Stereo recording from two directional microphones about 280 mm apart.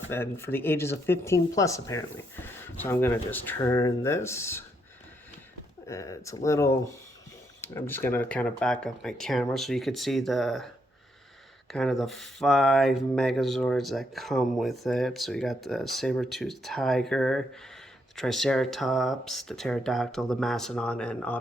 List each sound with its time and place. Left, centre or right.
0.1 s speech: centre
5.9 s speech: centre
11.7 s speech: centre